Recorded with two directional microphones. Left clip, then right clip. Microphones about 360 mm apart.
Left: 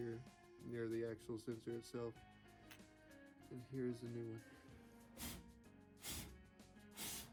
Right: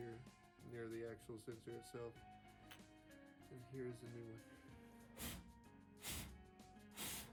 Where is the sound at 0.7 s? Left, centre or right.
Left.